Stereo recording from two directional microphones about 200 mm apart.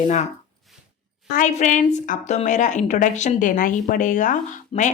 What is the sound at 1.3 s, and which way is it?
Speech, 35° left (ahead or behind).